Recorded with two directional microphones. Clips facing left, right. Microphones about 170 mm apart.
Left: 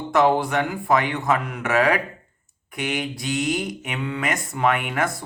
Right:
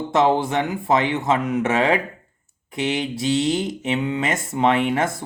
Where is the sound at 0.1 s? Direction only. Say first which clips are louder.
Even; 25° right (ahead or behind).